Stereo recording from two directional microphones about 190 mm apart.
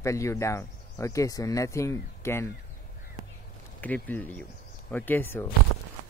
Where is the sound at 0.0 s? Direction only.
15° left (ahead or behind).